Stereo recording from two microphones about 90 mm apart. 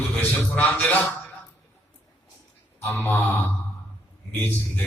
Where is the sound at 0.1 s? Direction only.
15° left (ahead or behind).